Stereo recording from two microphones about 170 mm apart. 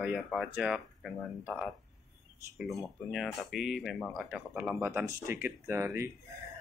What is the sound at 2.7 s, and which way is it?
Speech, centre (ahead or behind).